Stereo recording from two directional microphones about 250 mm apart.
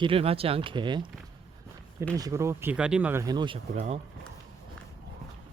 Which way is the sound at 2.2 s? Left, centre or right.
Centre.